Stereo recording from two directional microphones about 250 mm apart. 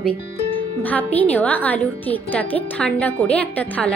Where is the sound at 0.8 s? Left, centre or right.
Centre.